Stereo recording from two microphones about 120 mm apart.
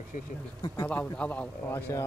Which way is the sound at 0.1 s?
90° left.